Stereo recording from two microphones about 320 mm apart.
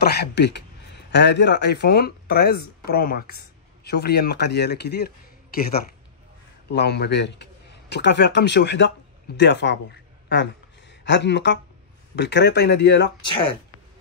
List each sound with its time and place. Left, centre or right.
0.0 s a man's voice: left
13.2 s speech: centre